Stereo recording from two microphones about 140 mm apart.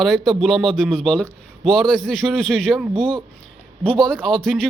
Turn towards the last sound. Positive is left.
turn(degrees=5)  # may be behind; listen again after turning